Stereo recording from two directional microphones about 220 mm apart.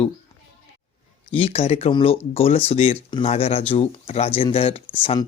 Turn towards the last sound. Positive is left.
turn(degrees=25)  # may be behind; listen again after turning